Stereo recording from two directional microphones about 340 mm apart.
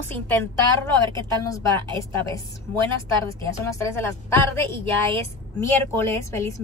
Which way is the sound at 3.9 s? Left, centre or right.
Centre.